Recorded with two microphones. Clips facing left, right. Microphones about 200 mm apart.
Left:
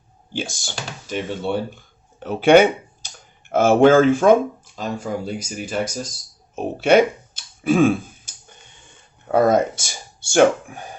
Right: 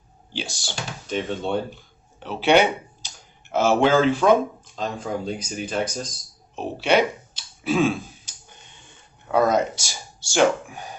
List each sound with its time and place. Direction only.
0.3 s speech: 50° left (ahead or behind)
1.0 s speech: 5° left (ahead or behind)
2.2 s speech: 50° left (ahead or behind)
4.8 s speech: 10° left (ahead or behind)
6.6 s a sound: 50° left (ahead or behind)
9.3 s speech: 50° left (ahead or behind)